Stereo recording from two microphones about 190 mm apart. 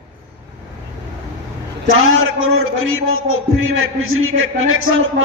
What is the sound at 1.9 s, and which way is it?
A man's voice, 90° right.